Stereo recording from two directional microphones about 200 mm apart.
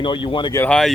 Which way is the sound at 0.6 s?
5° left (ahead or behind).